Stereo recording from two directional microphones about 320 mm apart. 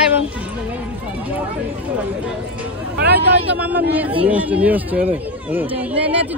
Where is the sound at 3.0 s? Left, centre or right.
Right.